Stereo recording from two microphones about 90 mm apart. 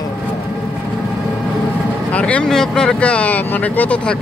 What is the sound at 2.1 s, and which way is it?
Speech, 15° left (ahead or behind).